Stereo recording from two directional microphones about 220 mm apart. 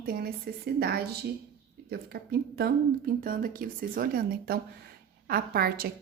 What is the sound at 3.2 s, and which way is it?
A woman's voice, 40° right (ahead or behind).